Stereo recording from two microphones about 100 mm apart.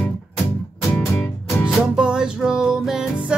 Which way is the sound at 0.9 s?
25° left (ahead or behind).